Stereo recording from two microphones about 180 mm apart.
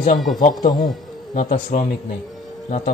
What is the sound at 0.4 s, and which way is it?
Speech, 45° left (ahead or behind).